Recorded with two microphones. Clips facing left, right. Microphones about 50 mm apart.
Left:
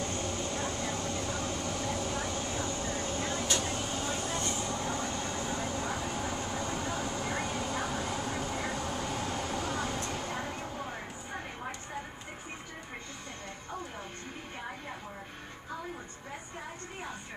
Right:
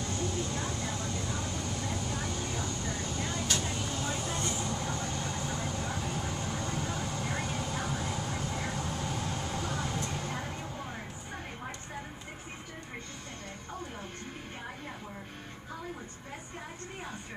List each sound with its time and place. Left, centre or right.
0.0 s vehicle: left
4.0 s vehicle: centre